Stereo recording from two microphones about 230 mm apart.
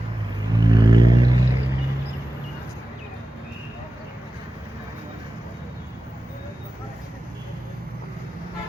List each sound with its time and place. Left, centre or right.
0.6 s vehicle: centre